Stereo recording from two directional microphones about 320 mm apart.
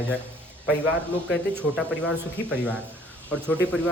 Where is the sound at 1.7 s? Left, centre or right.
Centre.